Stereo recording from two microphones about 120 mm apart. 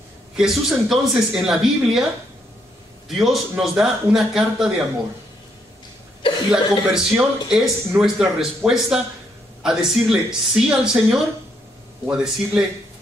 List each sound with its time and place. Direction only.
0.4 s speech: 5° right (ahead or behind)
3.1 s speech: centre (ahead or behind)
6.5 s speech: 5° right (ahead or behind)